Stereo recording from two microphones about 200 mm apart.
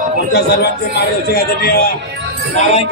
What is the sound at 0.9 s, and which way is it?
Speech, 50° left (ahead or behind).